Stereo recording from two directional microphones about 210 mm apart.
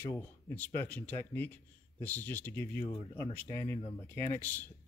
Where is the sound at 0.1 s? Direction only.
10° left (ahead or behind).